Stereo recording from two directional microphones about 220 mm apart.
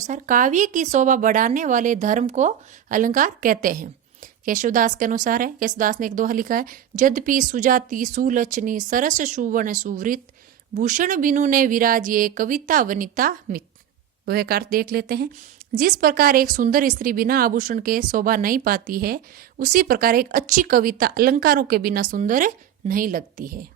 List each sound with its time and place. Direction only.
0.0 s a woman's voice: 35° right (ahead or behind)